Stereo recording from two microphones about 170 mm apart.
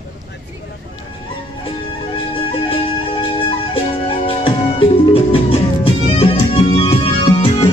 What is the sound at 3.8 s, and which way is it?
Music, 30° left (ahead or behind).